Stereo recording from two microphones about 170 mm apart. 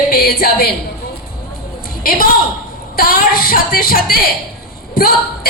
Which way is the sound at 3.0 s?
60° left (ahead or behind).